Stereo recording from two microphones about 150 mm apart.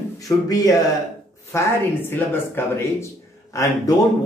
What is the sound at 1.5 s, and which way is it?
Speech, 20° left (ahead or behind).